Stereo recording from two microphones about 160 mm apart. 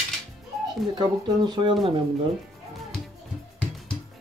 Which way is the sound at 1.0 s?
25° right (ahead or behind).